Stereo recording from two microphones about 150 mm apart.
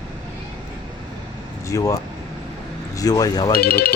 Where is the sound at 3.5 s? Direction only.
90° left.